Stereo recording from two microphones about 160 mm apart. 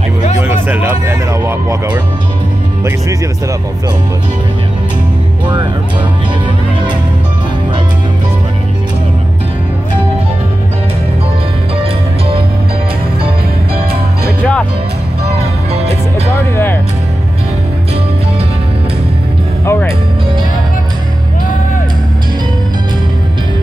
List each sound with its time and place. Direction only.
0.4 s a sound: 10° right (ahead or behind)
14.4 s speech: 10° left (ahead or behind)
19.6 s speech: 15° left (ahead or behind)